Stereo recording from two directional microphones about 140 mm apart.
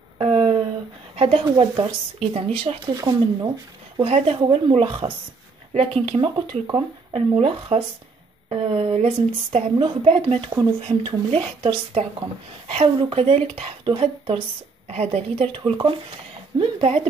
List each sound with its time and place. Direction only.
0.2 s a sound: 45° right (ahead or behind)
1.1 s a woman's voice: 45° right (ahead or behind)
2.9 s speech: 30° right (ahead or behind)
3.4 s a woman's voice: 45° right (ahead or behind)
14.9 s a woman's voice: 50° right (ahead or behind)